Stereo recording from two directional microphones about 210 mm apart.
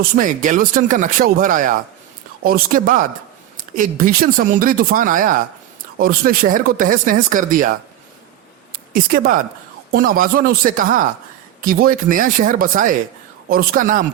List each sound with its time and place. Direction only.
0.0 s speech: 40° right (ahead or behind)
8.7 s speech: 40° right (ahead or behind)